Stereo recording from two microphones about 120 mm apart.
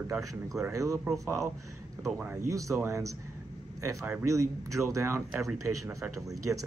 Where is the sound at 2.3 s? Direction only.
25° right (ahead or behind).